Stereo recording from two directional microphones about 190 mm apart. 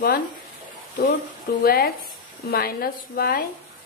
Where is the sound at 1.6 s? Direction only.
50° left (ahead or behind).